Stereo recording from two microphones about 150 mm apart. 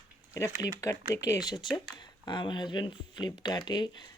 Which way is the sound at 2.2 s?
30° left (ahead or behind).